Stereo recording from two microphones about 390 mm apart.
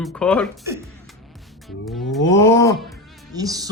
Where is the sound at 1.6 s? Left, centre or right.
Centre.